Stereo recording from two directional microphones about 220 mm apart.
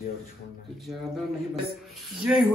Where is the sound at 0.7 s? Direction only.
Centre (ahead or behind).